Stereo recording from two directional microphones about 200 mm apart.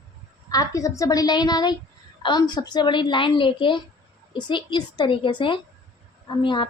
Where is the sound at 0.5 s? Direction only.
15° left (ahead or behind).